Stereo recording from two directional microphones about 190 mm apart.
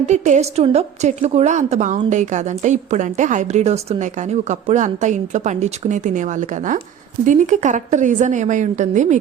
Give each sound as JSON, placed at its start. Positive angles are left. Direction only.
{"t": 0.0, "sound": "a woman's voice", "side_deg": -35}